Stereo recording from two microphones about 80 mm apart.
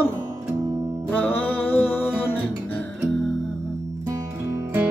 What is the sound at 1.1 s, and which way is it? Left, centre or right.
Music, left.